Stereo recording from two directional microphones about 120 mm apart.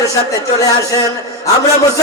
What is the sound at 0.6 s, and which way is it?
Speech, 30° left (ahead or behind).